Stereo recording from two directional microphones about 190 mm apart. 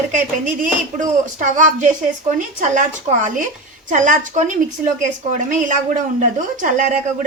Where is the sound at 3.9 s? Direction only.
40° right (ahead or behind).